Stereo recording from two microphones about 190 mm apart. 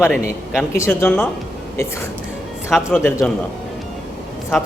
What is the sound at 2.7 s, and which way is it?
Speech, centre (ahead or behind).